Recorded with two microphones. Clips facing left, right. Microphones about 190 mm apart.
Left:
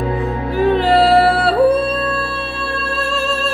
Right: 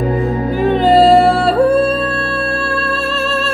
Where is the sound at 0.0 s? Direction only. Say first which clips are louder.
Right 4 dB; 40° right (ahead or behind).